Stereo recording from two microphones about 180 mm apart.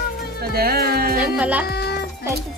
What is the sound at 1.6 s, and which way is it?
Music, 65° left (ahead or behind).